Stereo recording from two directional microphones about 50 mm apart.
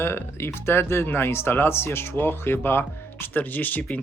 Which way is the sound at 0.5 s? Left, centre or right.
Left.